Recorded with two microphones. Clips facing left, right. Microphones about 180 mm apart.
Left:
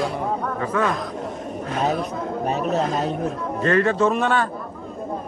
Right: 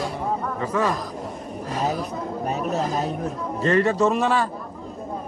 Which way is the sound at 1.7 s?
5° right (ahead or behind).